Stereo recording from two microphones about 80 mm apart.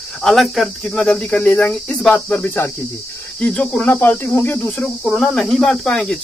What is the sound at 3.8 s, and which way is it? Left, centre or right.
Speech, left.